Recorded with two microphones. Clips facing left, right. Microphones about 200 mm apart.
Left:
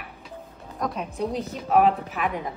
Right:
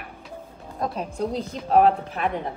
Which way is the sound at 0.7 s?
30° right (ahead or behind).